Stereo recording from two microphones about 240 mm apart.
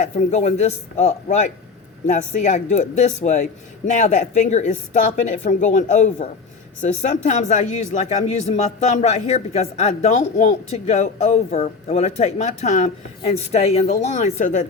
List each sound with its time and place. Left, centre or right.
0.0 s speech: left